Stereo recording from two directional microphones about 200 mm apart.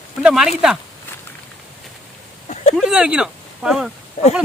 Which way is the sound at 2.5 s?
35° left (ahead or behind).